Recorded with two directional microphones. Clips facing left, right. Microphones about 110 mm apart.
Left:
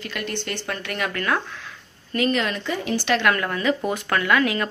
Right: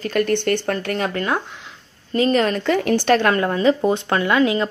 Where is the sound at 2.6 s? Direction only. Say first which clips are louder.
Right 7 dB; 65° right (ahead or behind).